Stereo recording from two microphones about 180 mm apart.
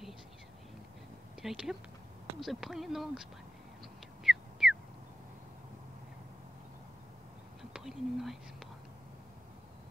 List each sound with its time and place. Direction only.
1.4 s speech: centre (ahead or behind)
4.2 s a sound: centre (ahead or behind)
7.7 s whispering: centre (ahead or behind)